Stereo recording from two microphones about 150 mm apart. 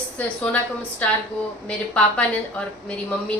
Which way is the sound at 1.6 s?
10° left (ahead or behind).